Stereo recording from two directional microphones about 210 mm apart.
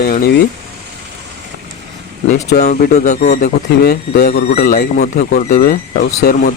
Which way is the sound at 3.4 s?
50° left (ahead or behind).